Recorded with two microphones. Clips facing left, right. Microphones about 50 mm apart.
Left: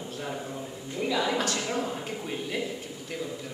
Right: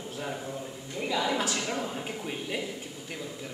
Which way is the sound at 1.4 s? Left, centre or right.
Centre.